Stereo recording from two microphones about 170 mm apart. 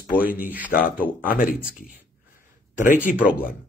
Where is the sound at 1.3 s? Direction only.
55° left (ahead or behind).